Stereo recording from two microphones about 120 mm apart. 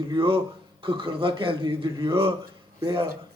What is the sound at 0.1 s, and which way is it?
A man's voice, 45° right (ahead or behind).